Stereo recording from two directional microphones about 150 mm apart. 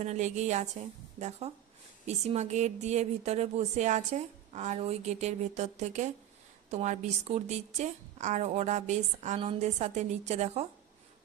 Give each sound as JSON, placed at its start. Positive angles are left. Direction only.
{"t": 0.0, "sound": "speech", "side_deg": -50}